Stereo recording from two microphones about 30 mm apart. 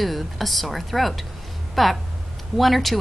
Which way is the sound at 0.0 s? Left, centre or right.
Centre.